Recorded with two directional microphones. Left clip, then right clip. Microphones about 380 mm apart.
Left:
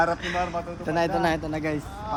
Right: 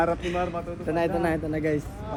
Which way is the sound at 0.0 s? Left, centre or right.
Left.